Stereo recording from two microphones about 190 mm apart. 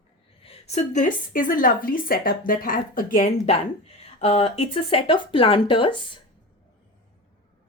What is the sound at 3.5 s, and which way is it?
A woman's voice, 35° left (ahead or behind).